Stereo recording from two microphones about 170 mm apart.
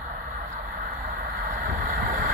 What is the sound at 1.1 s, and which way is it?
Vehicle, 50° right (ahead or behind).